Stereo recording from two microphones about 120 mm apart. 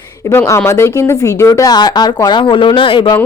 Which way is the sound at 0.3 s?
25° left (ahead or behind).